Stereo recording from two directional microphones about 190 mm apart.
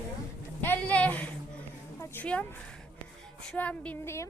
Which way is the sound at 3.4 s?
5° left (ahead or behind).